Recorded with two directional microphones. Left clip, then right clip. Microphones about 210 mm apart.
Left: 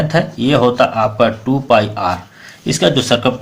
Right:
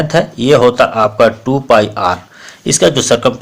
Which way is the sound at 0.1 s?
40° right (ahead or behind).